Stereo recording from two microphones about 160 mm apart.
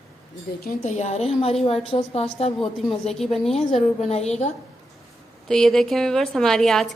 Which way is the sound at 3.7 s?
40° left (ahead or behind).